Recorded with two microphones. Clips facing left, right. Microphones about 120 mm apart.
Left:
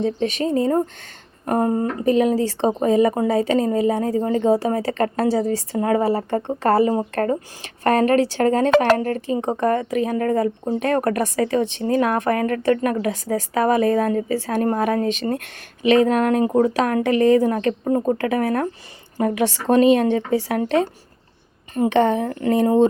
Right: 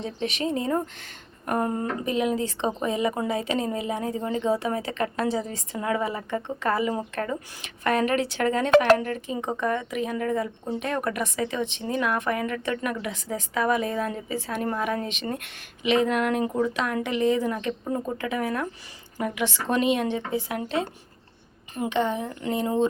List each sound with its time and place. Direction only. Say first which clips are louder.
0.0 s a woman's voice: left 7 dB; 40° left (ahead or behind); by 17.9 s 60° left (ahead or behind)
17.9 s a woman's voice: left 9 dB; 40° left (ahead or behind); by 20.7 s 65° left (ahead or behind)
21.8 s speech: left 8 dB; 60° left (ahead or behind)